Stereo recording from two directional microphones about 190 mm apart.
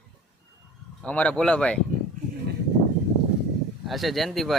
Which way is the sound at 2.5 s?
55° right (ahead or behind).